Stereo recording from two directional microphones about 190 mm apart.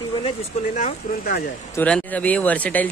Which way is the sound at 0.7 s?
45° left (ahead or behind).